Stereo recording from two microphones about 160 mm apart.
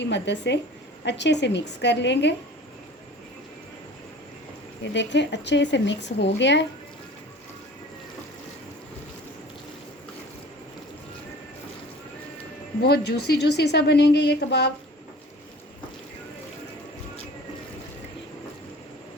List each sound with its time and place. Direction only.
0.0 s a woman's voice: 90° left
4.9 s a woman's voice: 90° left
12.8 s a woman's voice: 85° left